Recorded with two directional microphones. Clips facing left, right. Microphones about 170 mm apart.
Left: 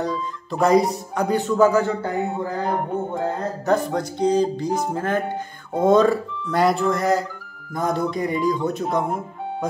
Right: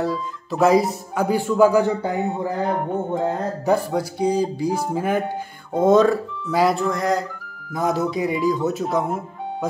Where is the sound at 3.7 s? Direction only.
5° right (ahead or behind).